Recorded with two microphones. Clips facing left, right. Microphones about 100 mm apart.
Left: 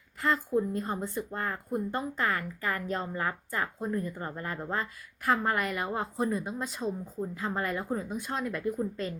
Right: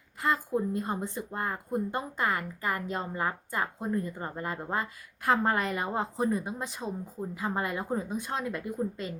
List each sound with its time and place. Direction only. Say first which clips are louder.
0.2 s speech: left 1 dB; 20° right (ahead or behind)